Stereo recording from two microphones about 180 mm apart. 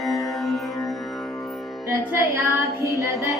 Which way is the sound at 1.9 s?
15° right (ahead or behind).